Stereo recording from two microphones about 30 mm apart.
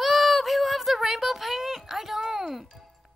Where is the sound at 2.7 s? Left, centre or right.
Centre.